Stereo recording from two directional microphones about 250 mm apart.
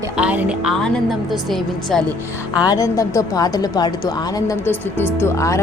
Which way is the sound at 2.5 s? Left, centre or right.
Centre.